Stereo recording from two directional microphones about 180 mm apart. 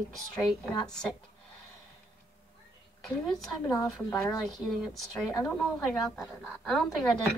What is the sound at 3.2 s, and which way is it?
A woman's voice, centre (ahead or behind).